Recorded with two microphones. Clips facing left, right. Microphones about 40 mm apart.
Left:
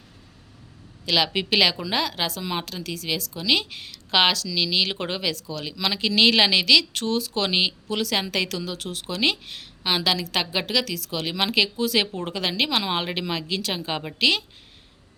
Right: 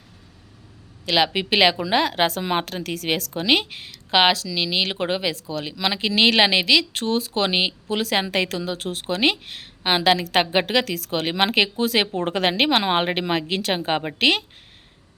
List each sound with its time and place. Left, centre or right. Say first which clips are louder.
1.0 s a woman's voice: right 2 dB; right
3.4 s a woman's voice: right 3 dB; right
3.8 s a woman's voice: right 2 dB; centre; by 14.4 s right